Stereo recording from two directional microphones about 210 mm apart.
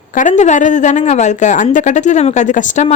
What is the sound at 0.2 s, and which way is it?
A woman's voice, 35° left (ahead or behind).